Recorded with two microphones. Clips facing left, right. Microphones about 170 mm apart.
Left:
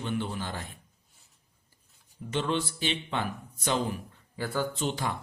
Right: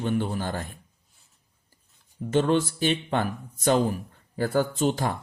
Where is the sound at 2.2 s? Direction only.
45° right (ahead or behind).